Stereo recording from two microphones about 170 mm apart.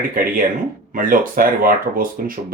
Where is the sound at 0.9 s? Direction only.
55° right (ahead or behind).